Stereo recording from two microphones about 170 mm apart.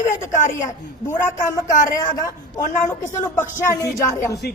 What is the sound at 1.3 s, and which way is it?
Speech, 45° left (ahead or behind).